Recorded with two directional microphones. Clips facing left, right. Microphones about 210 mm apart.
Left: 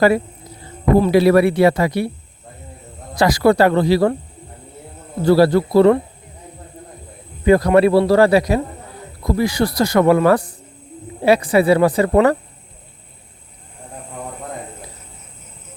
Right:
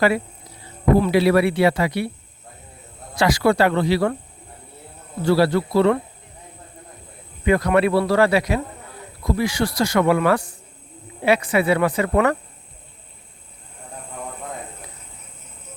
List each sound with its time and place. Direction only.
0.9 s speech: 45° left (ahead or behind)
3.2 s speech: 40° left (ahead or behind)
5.2 s speech: 40° left (ahead or behind)
7.4 s speech: 35° left (ahead or behind)